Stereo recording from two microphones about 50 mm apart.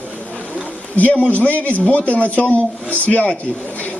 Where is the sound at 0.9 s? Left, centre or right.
Left.